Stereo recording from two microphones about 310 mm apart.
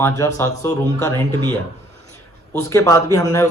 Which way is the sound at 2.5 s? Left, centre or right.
Centre.